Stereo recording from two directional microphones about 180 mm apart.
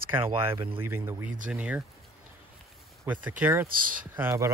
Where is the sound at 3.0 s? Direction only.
10° right (ahead or behind).